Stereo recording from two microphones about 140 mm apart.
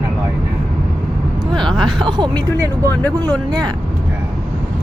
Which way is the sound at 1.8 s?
30° right (ahead or behind).